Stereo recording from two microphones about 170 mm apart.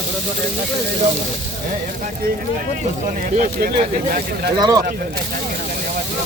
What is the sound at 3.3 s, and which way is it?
Speech, 55° right (ahead or behind).